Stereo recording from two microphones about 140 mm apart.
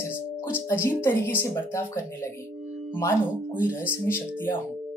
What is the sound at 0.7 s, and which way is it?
Speech, 15° left (ahead or behind).